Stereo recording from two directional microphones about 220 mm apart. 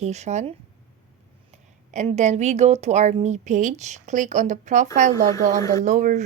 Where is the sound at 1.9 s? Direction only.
30° right (ahead or behind).